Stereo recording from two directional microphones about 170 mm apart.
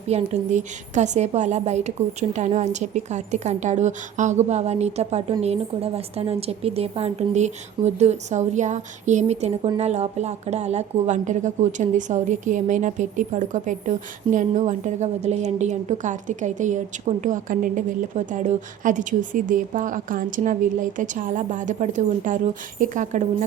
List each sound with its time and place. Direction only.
0.1 s a woman's voice: 45° right (ahead or behind)